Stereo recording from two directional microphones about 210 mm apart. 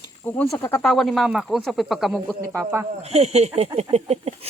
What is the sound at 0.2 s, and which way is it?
Speech, 10° left (ahead or behind).